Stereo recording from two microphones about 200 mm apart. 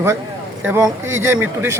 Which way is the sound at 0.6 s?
15° right (ahead or behind).